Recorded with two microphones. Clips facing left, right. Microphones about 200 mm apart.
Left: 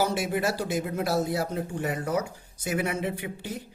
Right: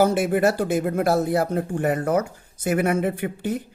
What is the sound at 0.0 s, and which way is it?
Speech, 55° right (ahead or behind).